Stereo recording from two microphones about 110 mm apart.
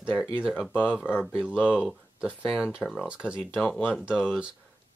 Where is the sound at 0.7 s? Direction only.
15° left (ahead or behind).